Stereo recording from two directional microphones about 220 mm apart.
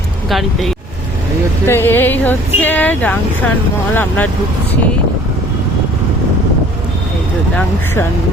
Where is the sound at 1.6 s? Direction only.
10° left (ahead or behind).